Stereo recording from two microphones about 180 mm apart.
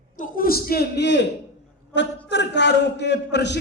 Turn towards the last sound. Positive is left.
turn(degrees=75)  # may be behind; listen again after turning